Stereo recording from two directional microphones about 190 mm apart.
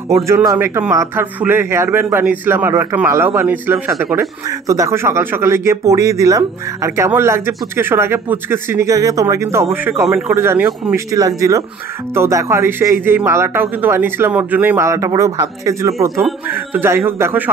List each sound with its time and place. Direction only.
0.1 s a man's voice: 15° right (ahead or behind)